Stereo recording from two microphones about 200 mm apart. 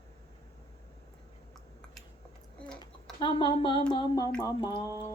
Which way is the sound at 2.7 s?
25° left (ahead or behind).